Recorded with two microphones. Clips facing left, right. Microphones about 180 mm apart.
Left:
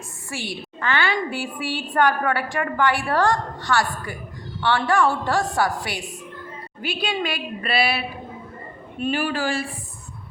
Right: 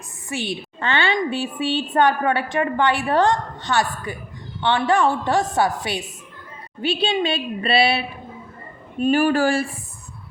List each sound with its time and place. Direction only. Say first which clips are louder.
0.3 s a woman's voice: right 4 dB; 20° right (ahead or behind)
9.0 s speech: right 7 dB; 45° right (ahead or behind)